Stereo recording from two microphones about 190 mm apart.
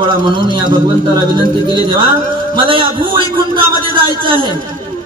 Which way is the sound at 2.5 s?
25° right (ahead or behind).